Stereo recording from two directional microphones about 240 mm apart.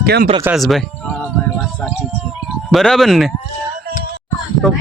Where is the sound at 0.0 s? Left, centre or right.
Right.